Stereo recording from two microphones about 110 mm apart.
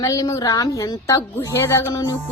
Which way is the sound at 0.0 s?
30° left (ahead or behind).